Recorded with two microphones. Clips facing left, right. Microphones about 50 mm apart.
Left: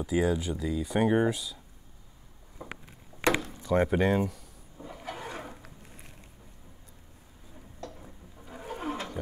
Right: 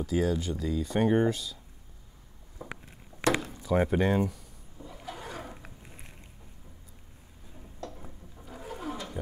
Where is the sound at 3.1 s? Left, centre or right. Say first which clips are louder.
Left 2 dB; left.